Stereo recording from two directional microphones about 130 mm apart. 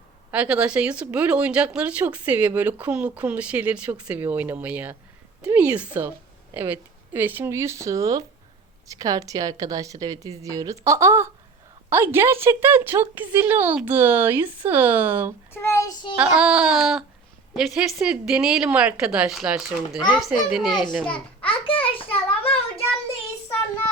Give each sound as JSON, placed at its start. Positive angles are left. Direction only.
{"t": 0.3, "sound": "a woman's voice", "side_deg": -10}
{"t": 15.5, "sound": "a child's voice", "side_deg": 20}
{"t": 16.1, "sound": "a woman's voice", "side_deg": -10}
{"t": 21.4, "sound": "a sound", "side_deg": 45}